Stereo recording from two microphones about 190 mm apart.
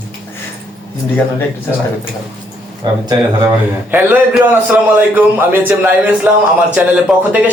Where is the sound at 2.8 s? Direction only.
25° right (ahead or behind).